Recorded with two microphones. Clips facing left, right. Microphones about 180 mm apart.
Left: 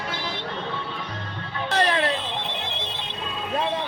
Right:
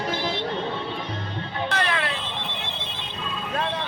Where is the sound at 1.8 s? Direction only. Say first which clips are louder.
Left 7 dB; 40° left (ahead or behind).